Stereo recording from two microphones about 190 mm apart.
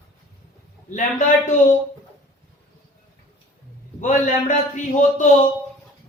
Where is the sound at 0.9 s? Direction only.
40° left (ahead or behind).